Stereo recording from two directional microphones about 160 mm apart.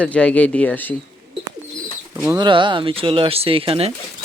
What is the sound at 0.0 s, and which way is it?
Speech, 5° left (ahead or behind).